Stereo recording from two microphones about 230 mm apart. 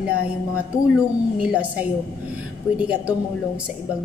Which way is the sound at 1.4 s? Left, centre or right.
Centre.